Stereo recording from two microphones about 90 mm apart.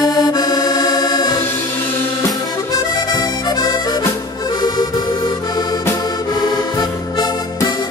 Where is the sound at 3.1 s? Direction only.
45° left (ahead or behind).